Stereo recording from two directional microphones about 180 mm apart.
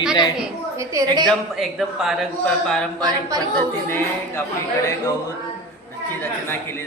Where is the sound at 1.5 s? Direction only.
Centre (ahead or behind).